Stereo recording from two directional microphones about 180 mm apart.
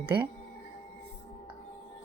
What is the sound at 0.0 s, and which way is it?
Speech, 30° right (ahead or behind).